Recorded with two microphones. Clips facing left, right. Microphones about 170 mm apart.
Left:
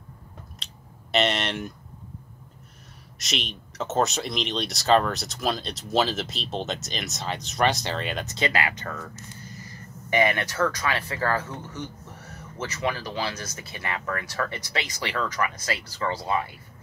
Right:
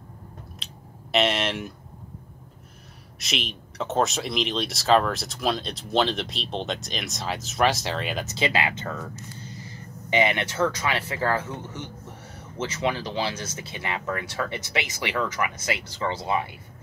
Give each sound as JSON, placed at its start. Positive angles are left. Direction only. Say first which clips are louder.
{"t": 0.6, "sound": "a sound", "louder": "right 3 dB", "side_deg": 0}
{"t": 1.1, "sound": "speech", "louder": "right 1 dB", "side_deg": 0}
{"t": 3.2, "sound": "speech", "louder": "right 1 dB", "side_deg": 0}
{"t": 8.4, "sound": "speech", "louder": "right 1 dB", "side_deg": -20}
{"t": 10.0, "sound": "speech", "louder": "even", "side_deg": -20}